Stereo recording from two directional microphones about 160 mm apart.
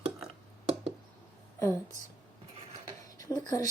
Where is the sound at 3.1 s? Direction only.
20° left (ahead or behind).